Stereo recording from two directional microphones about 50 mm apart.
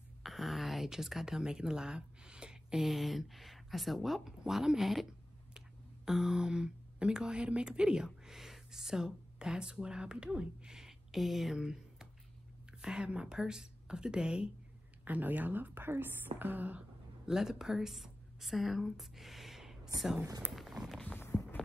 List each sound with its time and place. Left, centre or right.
0.2 s speech: centre
6.0 s speech: centre
15.0 s speech: right
17.3 s a woman's voice: centre
20.5 s a sound: centre
21.2 s walk: left